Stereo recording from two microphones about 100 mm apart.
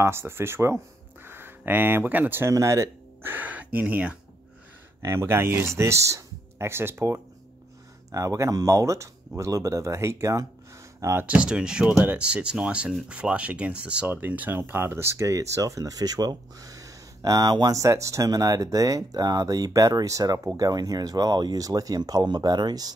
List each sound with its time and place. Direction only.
0.0 s speech: 25° right (ahead or behind)
2.5 s speech: 30° right (ahead or behind); by 4.2 s 10° right (ahead or behind)
5.0 s speech: 25° right (ahead or behind)
11.2 s speech: 10° right (ahead or behind); by 22.9 s 45° right (ahead or behind)